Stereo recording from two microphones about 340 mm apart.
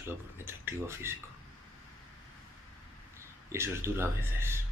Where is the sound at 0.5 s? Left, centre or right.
Centre.